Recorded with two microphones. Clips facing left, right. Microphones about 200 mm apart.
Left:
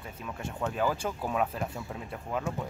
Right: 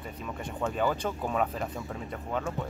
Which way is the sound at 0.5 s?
Centre (ahead or behind).